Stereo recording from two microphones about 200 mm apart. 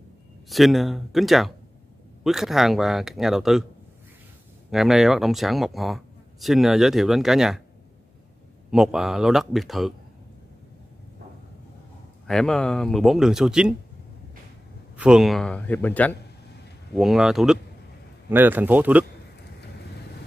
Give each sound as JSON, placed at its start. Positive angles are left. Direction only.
{"t": 0.5, "sound": "speech", "side_deg": 0}
{"t": 4.6, "sound": "speech", "side_deg": 0}
{"t": 8.6, "sound": "speech", "side_deg": -5}
{"t": 12.3, "sound": "speech", "side_deg": 0}
{"t": 15.0, "sound": "a man's voice", "side_deg": -5}